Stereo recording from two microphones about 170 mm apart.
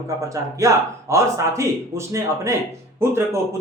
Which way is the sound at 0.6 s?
20° right (ahead or behind).